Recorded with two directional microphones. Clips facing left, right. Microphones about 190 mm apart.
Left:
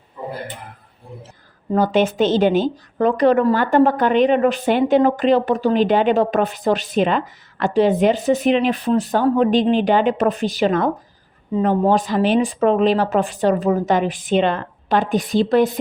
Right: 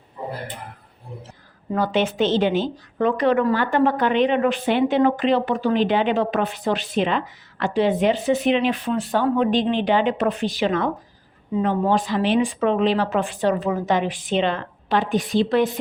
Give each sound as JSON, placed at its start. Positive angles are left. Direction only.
{"t": 1.7, "sound": "speech", "side_deg": 45}